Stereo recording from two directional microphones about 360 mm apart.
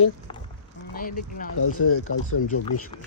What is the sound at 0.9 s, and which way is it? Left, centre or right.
Speech, left.